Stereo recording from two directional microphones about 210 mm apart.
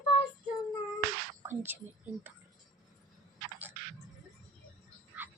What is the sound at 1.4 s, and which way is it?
Speech, 10° right (ahead or behind).